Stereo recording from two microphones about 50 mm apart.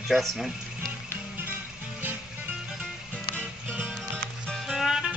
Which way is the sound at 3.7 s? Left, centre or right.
Right.